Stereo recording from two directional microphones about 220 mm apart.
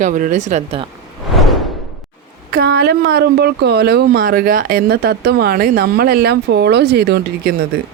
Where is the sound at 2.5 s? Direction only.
45° right (ahead or behind).